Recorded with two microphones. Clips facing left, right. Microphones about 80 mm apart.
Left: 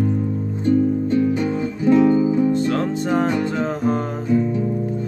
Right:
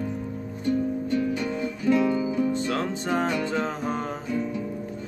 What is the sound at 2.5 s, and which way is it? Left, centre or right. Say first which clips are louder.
Music: left 7 dB; centre.